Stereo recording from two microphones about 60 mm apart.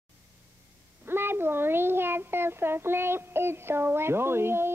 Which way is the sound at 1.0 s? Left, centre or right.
Right.